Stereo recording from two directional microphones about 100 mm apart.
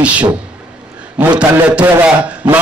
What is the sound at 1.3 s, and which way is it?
Speech, 10° right (ahead or behind).